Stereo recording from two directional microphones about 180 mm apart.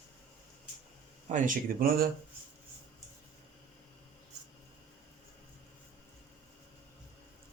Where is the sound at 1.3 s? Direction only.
45° right (ahead or behind).